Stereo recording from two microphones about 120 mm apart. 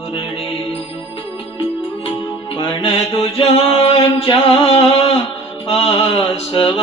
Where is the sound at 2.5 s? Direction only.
55° left (ahead or behind).